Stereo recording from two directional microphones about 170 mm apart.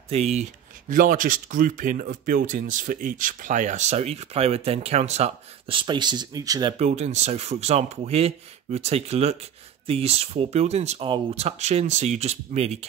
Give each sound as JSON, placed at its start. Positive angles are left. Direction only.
{"t": 0.1, "sound": "speech", "side_deg": -40}
{"t": 6.8, "sound": "speech", "side_deg": -40}